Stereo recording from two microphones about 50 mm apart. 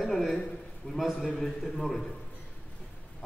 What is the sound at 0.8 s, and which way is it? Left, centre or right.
Speech, left.